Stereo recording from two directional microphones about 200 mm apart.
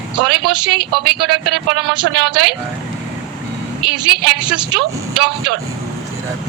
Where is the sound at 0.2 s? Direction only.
25° right (ahead or behind).